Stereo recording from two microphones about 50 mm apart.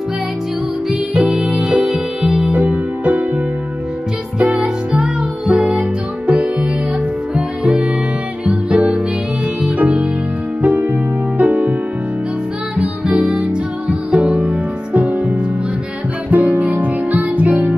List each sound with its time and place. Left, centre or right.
1.1 s music: right
1.9 s music: centre
2.5 s music: right
4.4 s music: right
12.7 s music: right